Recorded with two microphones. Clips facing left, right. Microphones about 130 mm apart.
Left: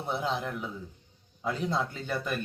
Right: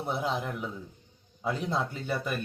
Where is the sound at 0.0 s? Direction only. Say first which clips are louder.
Even; 5° right (ahead or behind).